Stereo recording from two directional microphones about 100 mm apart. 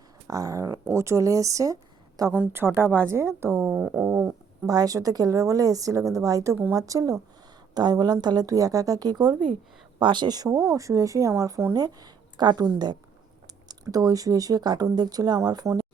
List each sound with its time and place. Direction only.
0.3 s speech: 35° right (ahead or behind)
2.3 s a woman's voice: 20° right (ahead or behind)
3.7 s speech: 15° right (ahead or behind)
4.6 s speech: 35° right (ahead or behind)
10.0 s a woman's voice: 50° right (ahead or behind)